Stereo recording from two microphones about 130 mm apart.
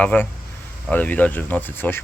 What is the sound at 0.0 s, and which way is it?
Speech, 10° left (ahead or behind).